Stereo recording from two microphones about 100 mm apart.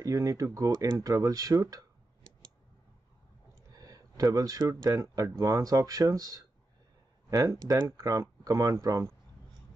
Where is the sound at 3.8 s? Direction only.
35° right (ahead or behind).